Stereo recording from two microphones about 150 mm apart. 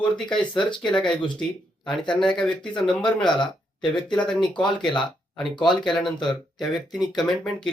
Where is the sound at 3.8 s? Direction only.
30° left (ahead or behind).